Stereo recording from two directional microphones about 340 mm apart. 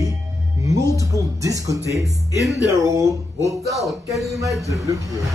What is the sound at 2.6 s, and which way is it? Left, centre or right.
Speech, centre.